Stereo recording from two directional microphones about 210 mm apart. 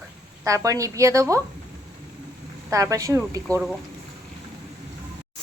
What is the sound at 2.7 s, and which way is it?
Speech, 15° right (ahead or behind).